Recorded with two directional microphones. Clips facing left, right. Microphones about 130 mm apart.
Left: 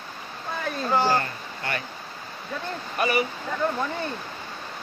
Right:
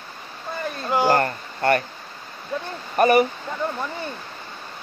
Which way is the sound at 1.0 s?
50° right (ahead or behind).